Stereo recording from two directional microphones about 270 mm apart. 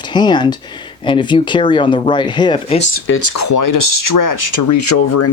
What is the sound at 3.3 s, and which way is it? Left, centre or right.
Speech, left.